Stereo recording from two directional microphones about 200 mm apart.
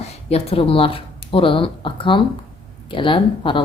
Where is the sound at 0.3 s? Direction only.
30° left (ahead or behind).